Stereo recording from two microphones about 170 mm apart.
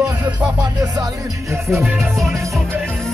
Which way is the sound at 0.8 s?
20° right (ahead or behind).